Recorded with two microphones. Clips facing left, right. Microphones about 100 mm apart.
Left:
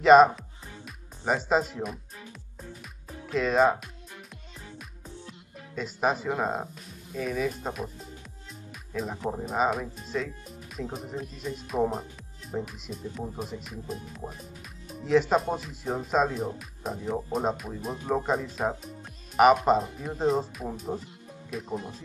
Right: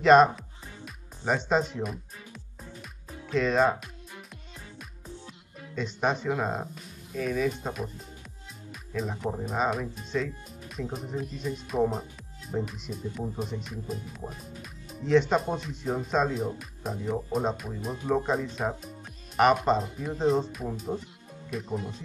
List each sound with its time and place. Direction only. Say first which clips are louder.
0.0 s music: left 2 dB; centre (ahead or behind)
5.8 s speech: left 1 dB; 5° left (ahead or behind)
8.9 s speech: even; centre (ahead or behind)